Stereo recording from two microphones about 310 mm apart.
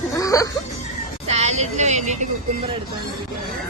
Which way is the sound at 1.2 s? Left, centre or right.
Right.